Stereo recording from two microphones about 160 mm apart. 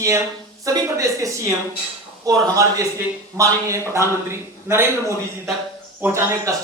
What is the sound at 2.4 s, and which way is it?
A woman's voice, 20° right (ahead or behind).